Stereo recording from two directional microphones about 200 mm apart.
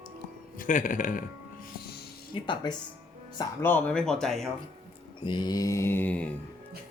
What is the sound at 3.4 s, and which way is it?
Speech, 10° left (ahead or behind).